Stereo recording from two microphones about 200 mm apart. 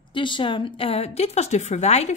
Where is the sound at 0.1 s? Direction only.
25° left (ahead or behind).